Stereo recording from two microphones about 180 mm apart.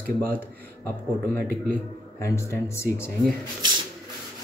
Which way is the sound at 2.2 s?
15° left (ahead or behind).